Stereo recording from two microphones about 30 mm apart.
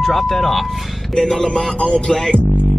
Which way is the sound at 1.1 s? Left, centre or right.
Left.